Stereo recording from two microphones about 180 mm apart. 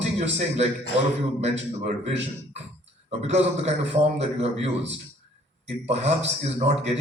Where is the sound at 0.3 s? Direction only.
35° right (ahead or behind).